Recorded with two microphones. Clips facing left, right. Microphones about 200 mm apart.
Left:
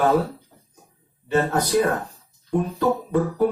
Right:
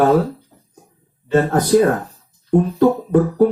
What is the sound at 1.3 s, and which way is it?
Speech, 45° right (ahead or behind).